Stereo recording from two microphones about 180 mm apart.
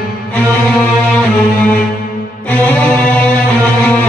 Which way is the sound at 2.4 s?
10° left (ahead or behind).